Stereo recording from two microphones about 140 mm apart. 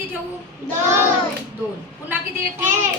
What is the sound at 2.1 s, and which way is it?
Speech, 15° right (ahead or behind).